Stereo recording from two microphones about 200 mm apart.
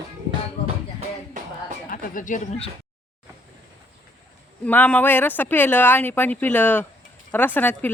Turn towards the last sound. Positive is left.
turn(degrees=10)  # may be behind; listen again after turning